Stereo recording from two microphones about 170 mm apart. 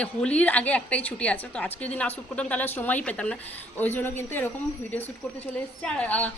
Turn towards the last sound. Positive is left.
turn(degrees=5)  # may be behind; listen again after turning